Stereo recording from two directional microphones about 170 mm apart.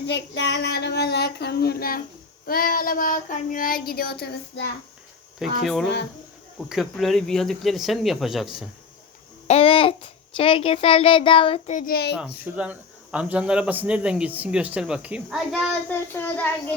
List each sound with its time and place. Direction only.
0.1 s child singing: 90° left; by 4.7 s 70° left (ahead or behind)
5.4 s speech: centre (ahead or behind)
9.5 s a child's voice: 35° left (ahead or behind); by 12.1 s 65° left (ahead or behind)
12.5 s speech: 5° right (ahead or behind)
15.7 s speech: 10° left (ahead or behind)